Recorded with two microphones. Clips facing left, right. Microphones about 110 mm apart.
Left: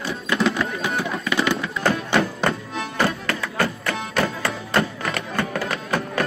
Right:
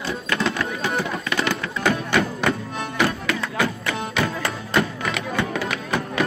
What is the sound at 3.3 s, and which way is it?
Music, 5° right (ahead or behind).